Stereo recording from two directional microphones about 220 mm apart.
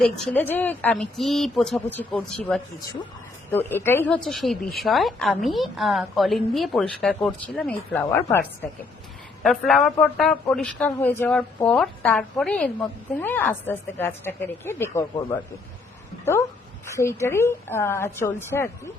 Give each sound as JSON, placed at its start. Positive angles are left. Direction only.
{"t": 0.0, "sound": "speech", "side_deg": 5}
{"t": 9.4, "sound": "a woman's voice", "side_deg": 0}
{"t": 16.8, "sound": "a woman's voice", "side_deg": 10}